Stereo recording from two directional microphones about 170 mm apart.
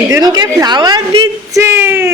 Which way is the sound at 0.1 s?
25° right (ahead or behind).